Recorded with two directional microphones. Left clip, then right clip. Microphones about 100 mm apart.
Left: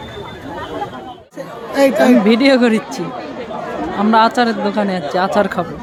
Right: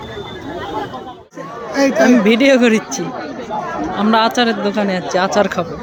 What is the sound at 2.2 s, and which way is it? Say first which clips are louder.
Speech: right 1 dB; 25° left (ahead or behind).